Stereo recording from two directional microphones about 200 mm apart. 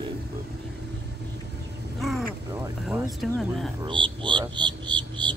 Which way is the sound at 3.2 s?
Centre (ahead or behind).